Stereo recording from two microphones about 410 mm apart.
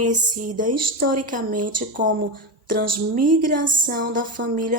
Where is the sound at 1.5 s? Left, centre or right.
Right.